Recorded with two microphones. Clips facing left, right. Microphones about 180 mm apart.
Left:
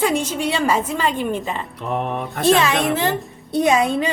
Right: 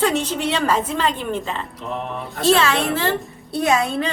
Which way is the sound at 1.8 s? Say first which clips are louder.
Left 4 dB; 60° left (ahead or behind).